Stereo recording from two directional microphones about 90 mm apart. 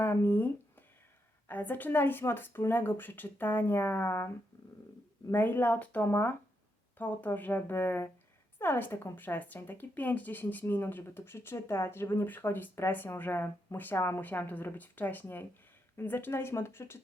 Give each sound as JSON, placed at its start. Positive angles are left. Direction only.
{"t": 0.0, "sound": "a sound", "side_deg": 25}
{"t": 1.5, "sound": "a woman's voice", "side_deg": 20}
{"t": 5.3, "sound": "a woman's voice", "side_deg": 20}